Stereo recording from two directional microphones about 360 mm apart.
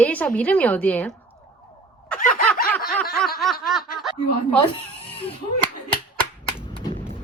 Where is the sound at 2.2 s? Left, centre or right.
Left.